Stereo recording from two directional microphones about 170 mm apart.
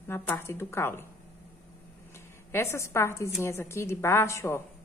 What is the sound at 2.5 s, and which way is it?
A woman's voice, 15° left (ahead or behind).